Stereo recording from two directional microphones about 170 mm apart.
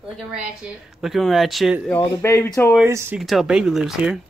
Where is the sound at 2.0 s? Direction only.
15° left (ahead or behind).